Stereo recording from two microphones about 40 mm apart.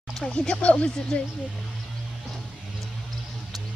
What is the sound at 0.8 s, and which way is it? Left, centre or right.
Speech, left.